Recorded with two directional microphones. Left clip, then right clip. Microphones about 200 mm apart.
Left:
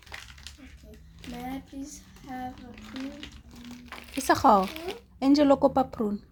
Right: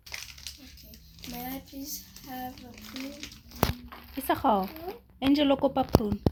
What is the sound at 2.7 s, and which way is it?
Speech, 30° left (ahead or behind).